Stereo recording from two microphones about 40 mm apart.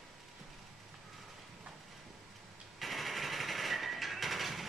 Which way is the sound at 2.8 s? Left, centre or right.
Centre.